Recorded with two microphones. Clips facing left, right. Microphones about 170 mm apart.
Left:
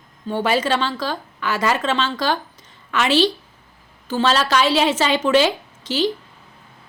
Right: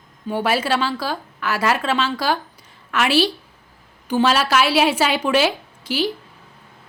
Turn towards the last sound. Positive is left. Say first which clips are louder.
# left 2 dB
turn(degrees=-10)  # may be behind; listen again after turning